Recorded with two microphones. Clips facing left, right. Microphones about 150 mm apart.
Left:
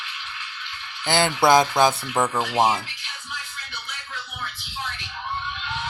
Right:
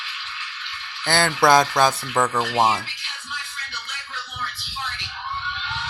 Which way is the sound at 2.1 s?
5° left (ahead or behind).